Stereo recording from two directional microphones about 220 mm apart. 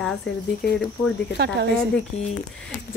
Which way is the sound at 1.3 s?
50° right (ahead or behind).